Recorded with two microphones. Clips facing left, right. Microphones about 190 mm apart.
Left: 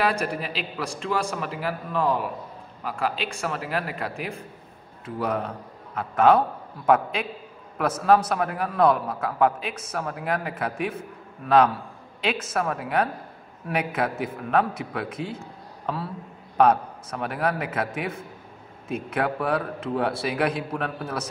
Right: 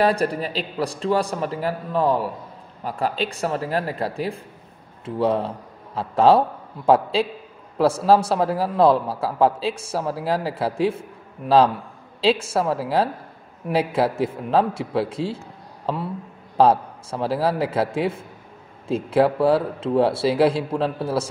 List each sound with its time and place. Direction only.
0.0 s a man's voice: 35° right (ahead or behind)